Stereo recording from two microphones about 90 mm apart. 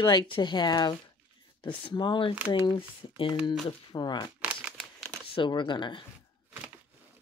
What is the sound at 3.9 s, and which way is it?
Speech, 55° left (ahead or behind).